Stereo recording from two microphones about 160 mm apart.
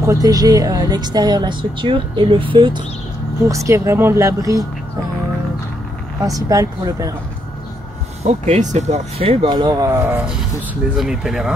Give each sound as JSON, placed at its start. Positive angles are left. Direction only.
{"t": 0.0, "sound": "a woman's voice", "side_deg": -20}
{"t": 3.4, "sound": "a woman's voice", "side_deg": -20}
{"t": 6.2, "sound": "a woman's voice", "side_deg": -25}
{"t": 8.2, "sound": "speech", "side_deg": -45}